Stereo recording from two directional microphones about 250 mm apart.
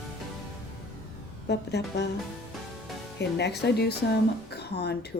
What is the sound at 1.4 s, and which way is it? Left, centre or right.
Speech, left.